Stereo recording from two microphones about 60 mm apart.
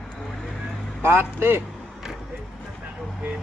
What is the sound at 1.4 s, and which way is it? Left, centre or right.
Speech, right.